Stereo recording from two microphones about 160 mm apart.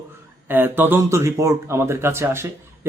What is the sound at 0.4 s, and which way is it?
A man's voice, 10° right (ahead or behind).